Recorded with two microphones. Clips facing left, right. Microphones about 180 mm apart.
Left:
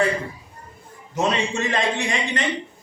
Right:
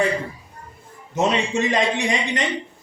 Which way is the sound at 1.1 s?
20° right (ahead or behind).